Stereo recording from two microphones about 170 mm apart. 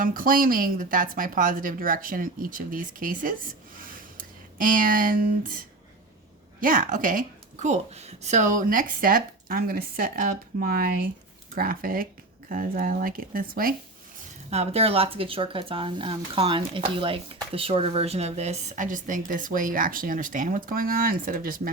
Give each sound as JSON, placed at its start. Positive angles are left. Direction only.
{"t": 0.0, "sound": "a woman's voice", "side_deg": -55}
{"t": 3.8, "sound": "a sound", "side_deg": -55}
{"t": 6.6, "sound": "a woman's voice", "side_deg": -55}
{"t": 14.5, "sound": "speech", "side_deg": -40}